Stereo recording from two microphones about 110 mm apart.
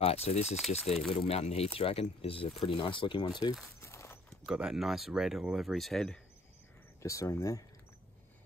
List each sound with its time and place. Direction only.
0.0 s speech: 70° left (ahead or behind); by 3.5 s 40° left (ahead or behind)
3.8 s horse: 25° left (ahead or behind)
4.5 s speech: 5° right (ahead or behind)
7.0 s speech: 30° left (ahead or behind)